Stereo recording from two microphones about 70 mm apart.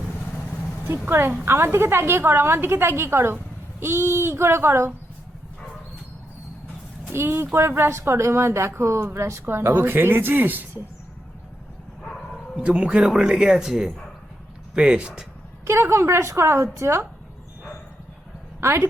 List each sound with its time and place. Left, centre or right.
0.3 s vehicle: left
1.0 s speech: right
7.1 s speech: right
12.5 s speech: centre
15.6 s speech: right
18.6 s speech: right